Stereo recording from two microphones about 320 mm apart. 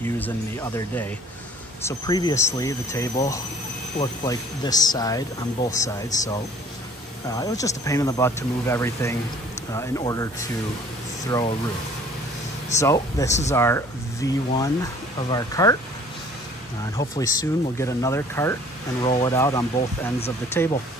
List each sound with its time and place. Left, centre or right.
0.0 s speech: centre
12.8 s speech: centre
17.2 s speech: centre